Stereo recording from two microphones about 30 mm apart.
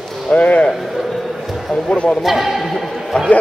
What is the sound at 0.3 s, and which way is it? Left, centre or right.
Speech, left.